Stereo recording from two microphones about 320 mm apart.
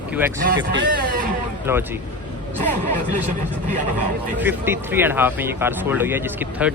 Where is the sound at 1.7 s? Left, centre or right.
Centre.